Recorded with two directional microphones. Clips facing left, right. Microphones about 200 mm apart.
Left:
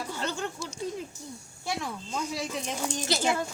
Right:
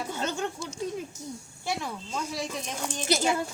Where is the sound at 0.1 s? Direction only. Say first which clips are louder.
Right 2 dB; 20° right (ahead or behind).